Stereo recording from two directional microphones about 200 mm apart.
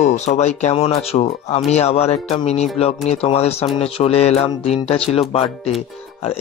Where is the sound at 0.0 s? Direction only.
35° left (ahead or behind).